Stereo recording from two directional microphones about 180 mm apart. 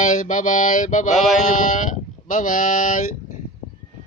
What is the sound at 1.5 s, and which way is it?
Speech, 45° left (ahead or behind).